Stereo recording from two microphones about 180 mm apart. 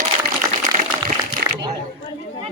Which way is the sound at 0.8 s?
50° right (ahead or behind).